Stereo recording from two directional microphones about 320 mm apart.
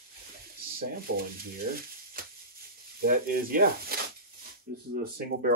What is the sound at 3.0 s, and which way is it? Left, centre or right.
Speech, right.